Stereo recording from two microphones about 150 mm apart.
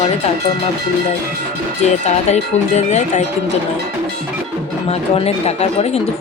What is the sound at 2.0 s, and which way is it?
Speech, 50° left (ahead or behind).